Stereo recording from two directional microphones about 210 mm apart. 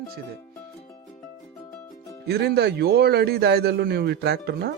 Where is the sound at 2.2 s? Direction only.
50° right (ahead or behind).